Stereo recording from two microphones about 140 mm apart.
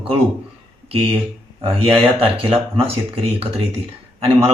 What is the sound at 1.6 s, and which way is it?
A man's voice, 40° right (ahead or behind).